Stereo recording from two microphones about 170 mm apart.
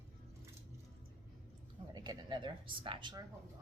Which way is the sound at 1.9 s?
25° right (ahead or behind).